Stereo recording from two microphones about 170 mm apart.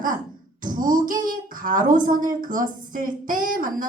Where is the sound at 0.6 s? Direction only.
55° right (ahead or behind).